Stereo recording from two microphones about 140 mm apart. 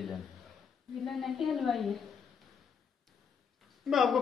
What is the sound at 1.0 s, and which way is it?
Speech, centre (ahead or behind).